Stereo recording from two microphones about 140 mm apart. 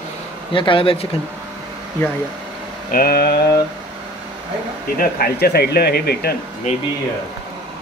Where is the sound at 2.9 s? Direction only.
90° left.